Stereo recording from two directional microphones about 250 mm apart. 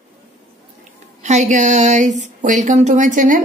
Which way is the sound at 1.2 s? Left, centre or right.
Right.